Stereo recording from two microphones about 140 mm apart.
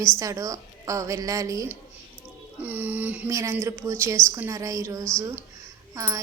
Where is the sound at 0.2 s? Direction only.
25° right (ahead or behind).